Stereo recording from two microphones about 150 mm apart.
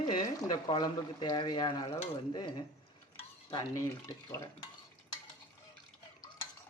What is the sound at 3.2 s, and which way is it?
Cutlery, 30° left (ahead or behind).